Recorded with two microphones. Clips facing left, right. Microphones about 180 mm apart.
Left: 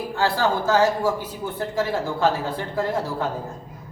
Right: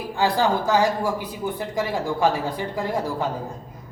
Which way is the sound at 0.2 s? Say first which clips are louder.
Right 1 dB; 15° right (ahead or behind).